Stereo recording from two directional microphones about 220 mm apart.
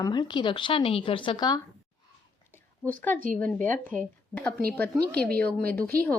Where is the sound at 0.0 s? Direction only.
20° left (ahead or behind).